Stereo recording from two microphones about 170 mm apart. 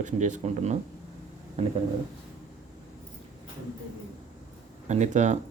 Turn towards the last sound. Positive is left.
turn(degrees=-45)  # may be behind; listen again after turning